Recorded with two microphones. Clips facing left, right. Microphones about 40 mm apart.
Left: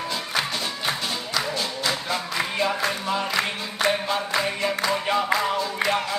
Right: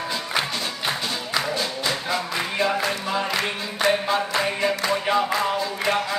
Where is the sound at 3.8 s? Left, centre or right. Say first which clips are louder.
Right 2 dB; centre.